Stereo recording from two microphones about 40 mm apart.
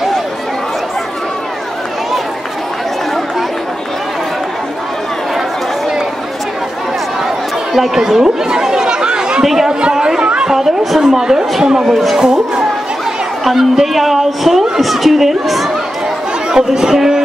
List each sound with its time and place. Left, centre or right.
7.7 s chatter: centre
9.5 s a woman's voice: centre
9.9 s a sound: centre
10.2 s a sound: right
10.5 s a woman's voice: centre
11.8 s a woman's voice: centre
12.2 s speech: centre
13.4 s a woman's voice: centre
16.4 s a woman's voice: centre